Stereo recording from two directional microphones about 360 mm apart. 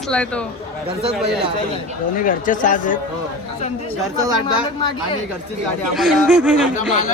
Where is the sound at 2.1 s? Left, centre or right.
Left.